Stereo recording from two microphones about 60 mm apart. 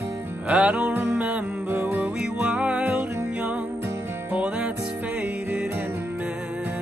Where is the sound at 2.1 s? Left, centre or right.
Centre.